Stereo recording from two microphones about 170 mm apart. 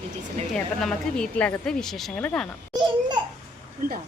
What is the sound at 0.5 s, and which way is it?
Speech, centre (ahead or behind).